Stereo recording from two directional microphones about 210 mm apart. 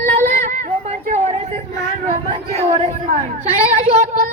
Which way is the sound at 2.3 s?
30° right (ahead or behind).